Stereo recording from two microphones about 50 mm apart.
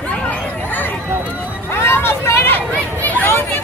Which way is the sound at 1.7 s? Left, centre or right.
Left.